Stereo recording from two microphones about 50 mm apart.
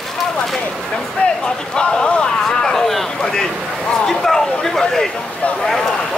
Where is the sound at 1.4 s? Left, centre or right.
Centre.